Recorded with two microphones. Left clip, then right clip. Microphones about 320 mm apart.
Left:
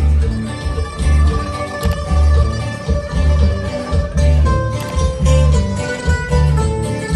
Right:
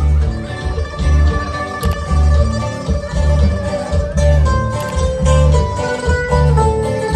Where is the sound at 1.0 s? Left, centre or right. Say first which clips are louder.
Right 1 dB; centre.